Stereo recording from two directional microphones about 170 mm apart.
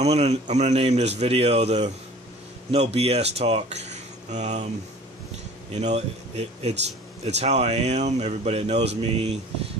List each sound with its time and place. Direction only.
0.0 s speech: 40° right (ahead or behind)
5.8 s speech: 40° right (ahead or behind)